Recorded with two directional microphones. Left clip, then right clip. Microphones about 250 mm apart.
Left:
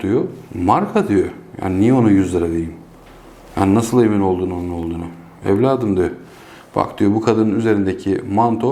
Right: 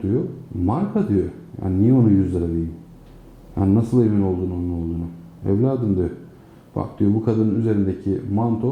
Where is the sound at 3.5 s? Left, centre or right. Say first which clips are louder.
Left 5 dB; centre.